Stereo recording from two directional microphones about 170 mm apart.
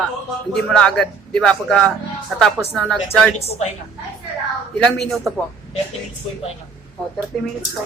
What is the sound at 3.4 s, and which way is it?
Speech, 35° left (ahead or behind).